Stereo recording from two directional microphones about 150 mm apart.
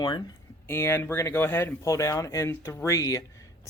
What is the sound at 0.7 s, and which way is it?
Speech, 15° left (ahead or behind).